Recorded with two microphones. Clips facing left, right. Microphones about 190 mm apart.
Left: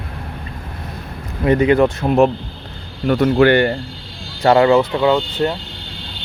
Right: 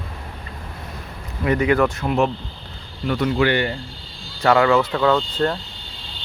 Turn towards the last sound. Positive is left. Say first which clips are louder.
# left 3 dB
turn(degrees=15)  # may be behind; listen again after turning